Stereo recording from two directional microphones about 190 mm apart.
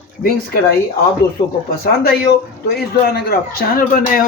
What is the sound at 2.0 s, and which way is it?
Speech, 55° left (ahead or behind).